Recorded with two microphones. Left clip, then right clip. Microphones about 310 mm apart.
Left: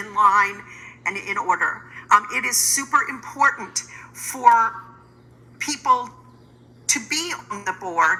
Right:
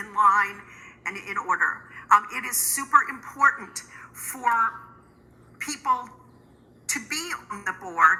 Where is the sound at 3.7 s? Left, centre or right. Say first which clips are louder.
Left 8 dB; left.